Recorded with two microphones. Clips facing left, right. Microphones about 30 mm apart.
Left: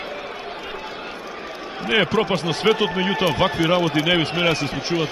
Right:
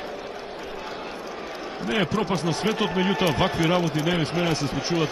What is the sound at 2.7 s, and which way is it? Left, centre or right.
Speech, centre.